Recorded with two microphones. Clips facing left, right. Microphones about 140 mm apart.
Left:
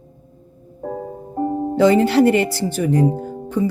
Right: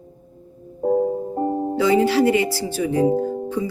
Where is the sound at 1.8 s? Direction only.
60° left (ahead or behind).